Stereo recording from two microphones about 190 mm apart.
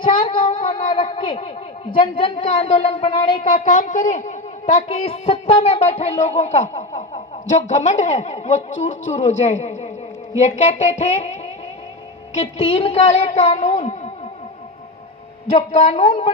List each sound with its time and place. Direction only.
0.0 s speech: 25° left (ahead or behind)
3.4 s a man's voice: 40° left (ahead or behind)
15.5 s a man's voice: 35° left (ahead or behind)
16.0 s speech: 25° left (ahead or behind)